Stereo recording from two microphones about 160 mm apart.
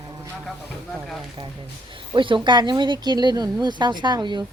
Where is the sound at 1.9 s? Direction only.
30° right (ahead or behind).